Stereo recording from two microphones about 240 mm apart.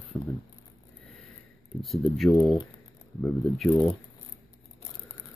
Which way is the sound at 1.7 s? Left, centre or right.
Centre.